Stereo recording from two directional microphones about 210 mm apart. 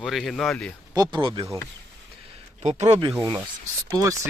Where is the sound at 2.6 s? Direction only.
30° right (ahead or behind).